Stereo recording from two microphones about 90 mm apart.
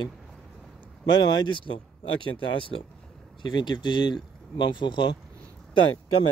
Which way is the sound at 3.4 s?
55° left (ahead or behind).